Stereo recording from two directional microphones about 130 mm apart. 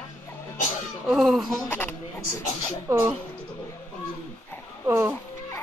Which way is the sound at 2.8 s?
15° right (ahead or behind).